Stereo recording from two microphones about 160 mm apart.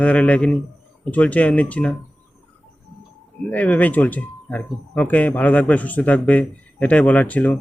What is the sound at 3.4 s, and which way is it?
Speech, 10° left (ahead or behind).